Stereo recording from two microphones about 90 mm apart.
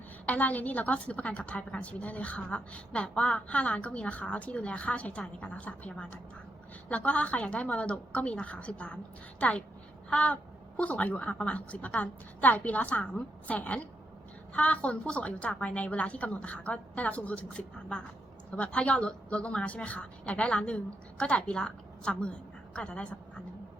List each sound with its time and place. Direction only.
0.3 s a woman's voice: 15° left (ahead or behind)
10.1 s a sound: 15° left (ahead or behind)
10.8 s a woman's voice: 15° left (ahead or behind)